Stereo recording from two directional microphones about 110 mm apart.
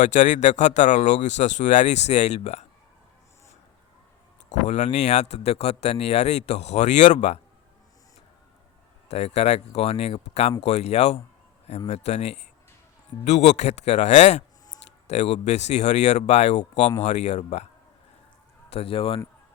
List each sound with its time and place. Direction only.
0.0 s speech: 90° left
4.6 s speech: 90° left
9.0 s speech: 75° left (ahead or behind)
13.2 s speech: 90° left
18.7 s speech: 60° left (ahead or behind)